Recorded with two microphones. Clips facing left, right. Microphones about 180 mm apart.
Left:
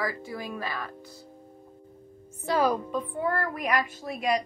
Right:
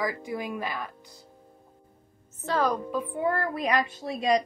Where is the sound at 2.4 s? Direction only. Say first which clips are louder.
Left 2 dB; 10° left (ahead or behind).